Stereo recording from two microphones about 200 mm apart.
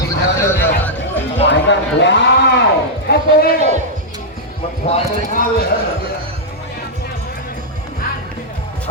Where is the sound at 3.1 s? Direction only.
50° left (ahead or behind).